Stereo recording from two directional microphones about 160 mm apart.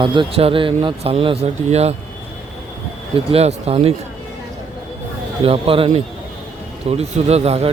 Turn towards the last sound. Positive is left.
turn(degrees=-40)  # may be behind; listen again after turning